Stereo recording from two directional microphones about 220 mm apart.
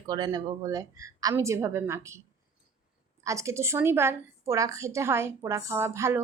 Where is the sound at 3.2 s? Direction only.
15° right (ahead or behind).